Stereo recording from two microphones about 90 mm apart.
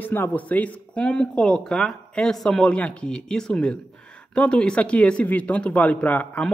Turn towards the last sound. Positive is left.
turn(degrees=15)  # may be behind; listen again after turning